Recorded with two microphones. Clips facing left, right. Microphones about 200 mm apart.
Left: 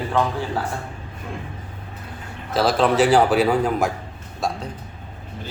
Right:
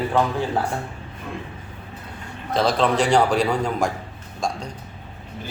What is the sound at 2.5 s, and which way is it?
A man's voice, 5° left (ahead or behind).